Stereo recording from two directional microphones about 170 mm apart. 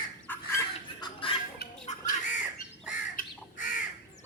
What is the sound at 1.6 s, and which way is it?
Squawk, 70° left (ahead or behind).